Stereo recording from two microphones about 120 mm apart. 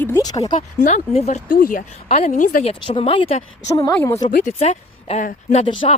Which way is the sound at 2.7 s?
50° left (ahead or behind).